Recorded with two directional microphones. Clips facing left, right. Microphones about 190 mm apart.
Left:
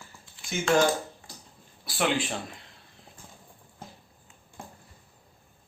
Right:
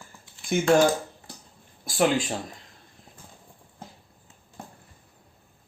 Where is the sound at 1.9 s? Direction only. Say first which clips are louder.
Right 4 dB; 45° right (ahead or behind).